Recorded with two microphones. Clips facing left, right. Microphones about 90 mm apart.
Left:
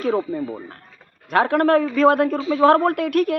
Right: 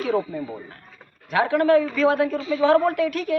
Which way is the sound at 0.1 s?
30° left (ahead or behind).